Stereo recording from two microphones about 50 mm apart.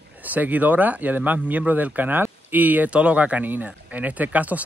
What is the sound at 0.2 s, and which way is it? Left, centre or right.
Speech, right.